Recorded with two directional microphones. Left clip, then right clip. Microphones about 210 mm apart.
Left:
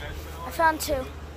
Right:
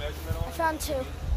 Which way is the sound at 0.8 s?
30° left (ahead or behind).